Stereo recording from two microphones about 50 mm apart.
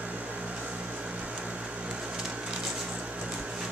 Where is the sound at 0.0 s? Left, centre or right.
Right.